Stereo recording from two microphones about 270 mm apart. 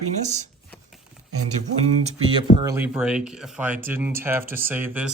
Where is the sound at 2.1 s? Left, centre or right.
Centre.